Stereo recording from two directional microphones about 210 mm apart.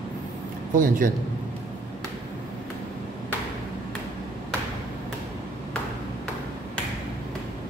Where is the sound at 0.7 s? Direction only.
40° right (ahead or behind).